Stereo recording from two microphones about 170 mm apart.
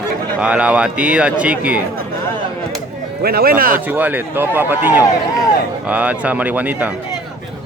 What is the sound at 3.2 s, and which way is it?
Speech, 65° right (ahead or behind).